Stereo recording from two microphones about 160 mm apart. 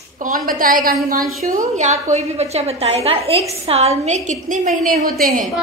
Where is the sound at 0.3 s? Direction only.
60° right (ahead or behind); by 4.2 s 40° right (ahead or behind).